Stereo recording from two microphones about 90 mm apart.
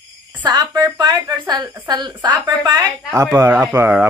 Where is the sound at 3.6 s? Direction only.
20° right (ahead or behind).